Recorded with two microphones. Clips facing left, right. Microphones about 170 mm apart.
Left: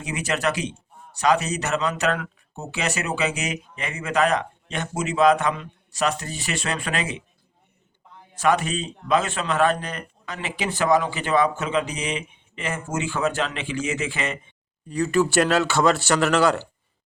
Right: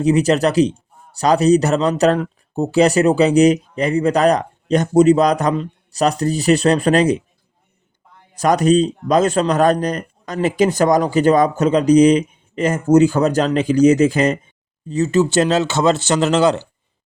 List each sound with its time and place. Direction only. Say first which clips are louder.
0.0 s a man's voice: right 11 dB; 35° right (ahead or behind)
8.4 s a man's voice: right 9 dB; 40° right (ahead or behind)
14.8 s speech: right 5 dB; 25° right (ahead or behind)